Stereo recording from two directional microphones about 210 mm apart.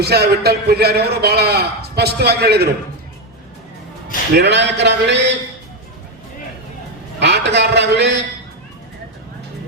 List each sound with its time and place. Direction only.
0.0 s a man's voice: 50° right (ahead or behind)
4.4 s speech: 55° right (ahead or behind)
7.2 s a man's voice: 55° right (ahead or behind)